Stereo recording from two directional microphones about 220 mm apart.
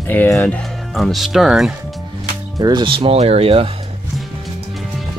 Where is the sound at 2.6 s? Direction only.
20° right (ahead or behind).